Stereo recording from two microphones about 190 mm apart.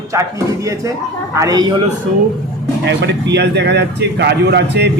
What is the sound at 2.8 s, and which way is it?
A man's voice, 65° right (ahead or behind).